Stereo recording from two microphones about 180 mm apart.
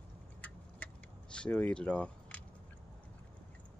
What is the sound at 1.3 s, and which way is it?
Speech, 5° left (ahead or behind).